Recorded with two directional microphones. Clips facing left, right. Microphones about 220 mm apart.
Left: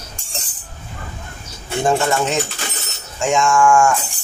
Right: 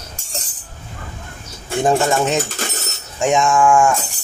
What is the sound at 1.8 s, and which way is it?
Speech, 20° right (ahead or behind).